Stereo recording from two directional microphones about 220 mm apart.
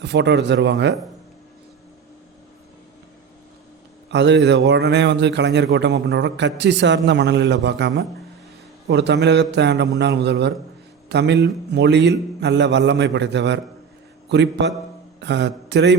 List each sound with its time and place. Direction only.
0.0 s a man's voice: 50° right (ahead or behind)
4.1 s a man's voice: 50° right (ahead or behind)